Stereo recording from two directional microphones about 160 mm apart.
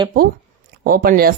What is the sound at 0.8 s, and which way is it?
Speech, 65° right (ahead or behind).